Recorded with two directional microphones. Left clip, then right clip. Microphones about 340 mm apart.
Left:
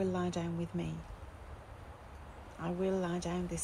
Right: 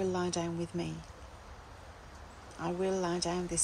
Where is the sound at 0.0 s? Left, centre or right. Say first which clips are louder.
Right 3 dB; centre.